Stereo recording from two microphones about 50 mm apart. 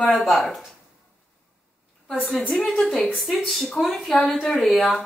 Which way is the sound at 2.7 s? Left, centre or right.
Centre.